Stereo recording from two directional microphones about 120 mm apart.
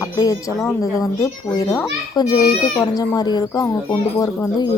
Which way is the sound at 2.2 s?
35° left (ahead or behind).